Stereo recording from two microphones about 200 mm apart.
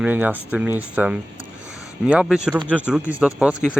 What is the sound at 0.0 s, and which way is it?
Speech, 10° right (ahead or behind).